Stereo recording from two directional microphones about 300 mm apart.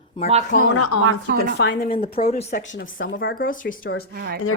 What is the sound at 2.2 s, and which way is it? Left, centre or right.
Speech, left.